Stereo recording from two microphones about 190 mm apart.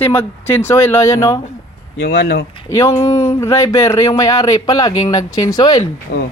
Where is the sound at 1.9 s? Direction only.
65° left (ahead or behind).